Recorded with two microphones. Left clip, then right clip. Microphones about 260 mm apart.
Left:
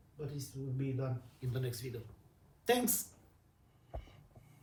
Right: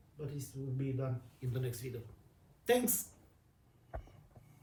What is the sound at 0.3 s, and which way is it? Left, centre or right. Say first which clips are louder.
Speech: even; centre.